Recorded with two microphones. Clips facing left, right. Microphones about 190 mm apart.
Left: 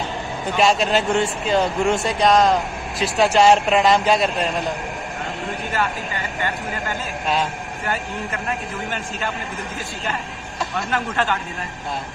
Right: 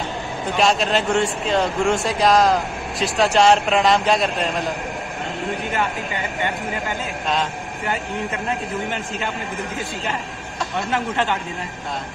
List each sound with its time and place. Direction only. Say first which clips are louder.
0.6 s speech: left 1 dB; centre (ahead or behind)
8.5 s a man's voice: right 2 dB; 20° right (ahead or behind)
10.9 s a man's voice: right 1 dB; 20° right (ahead or behind)